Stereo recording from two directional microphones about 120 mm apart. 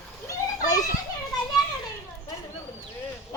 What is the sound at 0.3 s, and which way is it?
Children playing, 30° left (ahead or behind).